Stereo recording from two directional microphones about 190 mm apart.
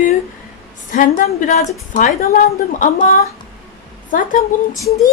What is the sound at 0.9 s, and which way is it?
A woman's voice, 45° left (ahead or behind).